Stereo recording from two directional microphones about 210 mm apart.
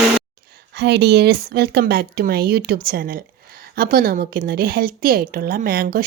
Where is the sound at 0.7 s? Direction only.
50° right (ahead or behind).